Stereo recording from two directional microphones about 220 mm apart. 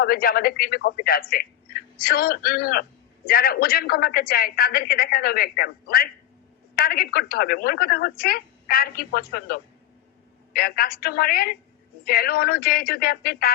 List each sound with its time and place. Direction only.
0.0 s a woman's voice: 45° left (ahead or behind)